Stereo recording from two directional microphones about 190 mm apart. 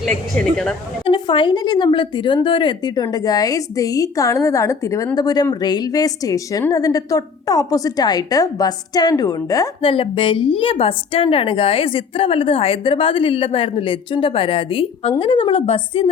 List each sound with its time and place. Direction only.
0.0 s a woman's voice: 5° left (ahead or behind)
1.0 s a woman's voice: 25° left (ahead or behind)